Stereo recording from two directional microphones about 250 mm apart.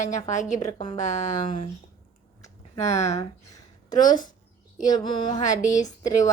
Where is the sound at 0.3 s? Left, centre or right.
Left.